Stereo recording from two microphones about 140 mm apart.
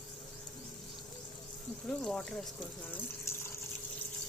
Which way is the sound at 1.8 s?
5° left (ahead or behind).